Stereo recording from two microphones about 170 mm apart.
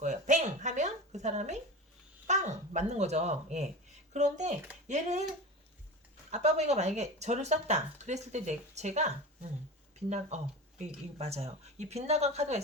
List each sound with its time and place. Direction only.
0.0 s a sound: 45° right (ahead or behind)
2.2 s dog: 45° right (ahead or behind)
4.1 s speech: 45° right (ahead or behind)
6.3 s speech: 40° right (ahead or behind)